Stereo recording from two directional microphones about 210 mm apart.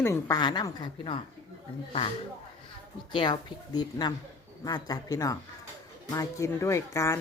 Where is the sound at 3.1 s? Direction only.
20° left (ahead or behind).